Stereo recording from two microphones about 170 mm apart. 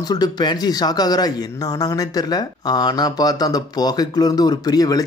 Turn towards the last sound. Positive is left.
turn(degrees=20)  # may be behind; listen again after turning